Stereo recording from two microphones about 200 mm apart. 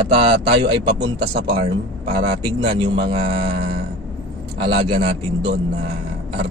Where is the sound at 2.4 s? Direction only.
25° right (ahead or behind).